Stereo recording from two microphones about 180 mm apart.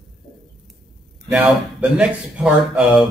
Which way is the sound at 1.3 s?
5° right (ahead or behind).